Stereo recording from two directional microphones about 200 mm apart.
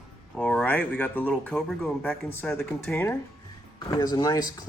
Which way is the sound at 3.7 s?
20° left (ahead or behind).